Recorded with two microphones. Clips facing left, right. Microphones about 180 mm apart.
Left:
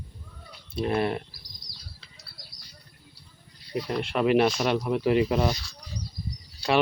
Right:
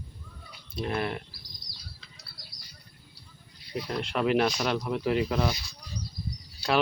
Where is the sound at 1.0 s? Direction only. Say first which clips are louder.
Left 5 dB; 35° left (ahead or behind).